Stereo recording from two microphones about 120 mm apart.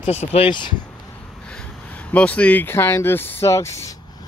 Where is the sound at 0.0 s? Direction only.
65° left (ahead or behind).